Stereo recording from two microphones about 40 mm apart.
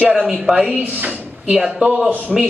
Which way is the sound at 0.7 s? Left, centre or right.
Right.